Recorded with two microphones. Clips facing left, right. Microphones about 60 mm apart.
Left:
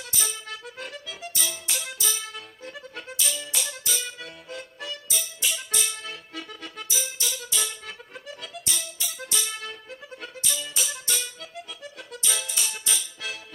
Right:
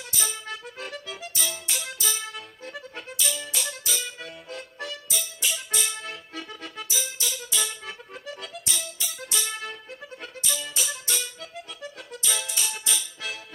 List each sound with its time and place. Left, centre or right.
0.2 s music: centre